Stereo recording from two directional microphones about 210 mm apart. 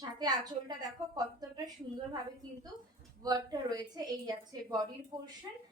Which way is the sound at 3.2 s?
20° right (ahead or behind).